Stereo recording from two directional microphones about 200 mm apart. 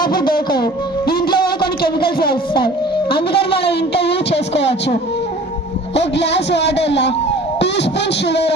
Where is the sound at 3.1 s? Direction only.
55° left (ahead or behind).